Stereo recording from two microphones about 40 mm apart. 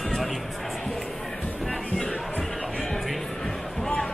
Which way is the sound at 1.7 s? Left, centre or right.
Centre.